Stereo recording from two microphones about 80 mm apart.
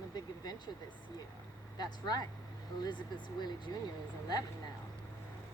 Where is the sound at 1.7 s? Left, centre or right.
Left.